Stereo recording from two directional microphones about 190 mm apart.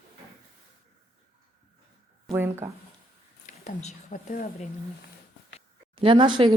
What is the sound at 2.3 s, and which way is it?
Speech, 15° right (ahead or behind).